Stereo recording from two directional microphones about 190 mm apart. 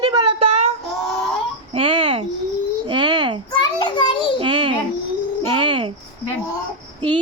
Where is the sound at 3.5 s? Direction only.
25° left (ahead or behind).